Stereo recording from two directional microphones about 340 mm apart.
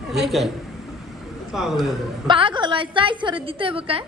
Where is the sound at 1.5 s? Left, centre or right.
Centre.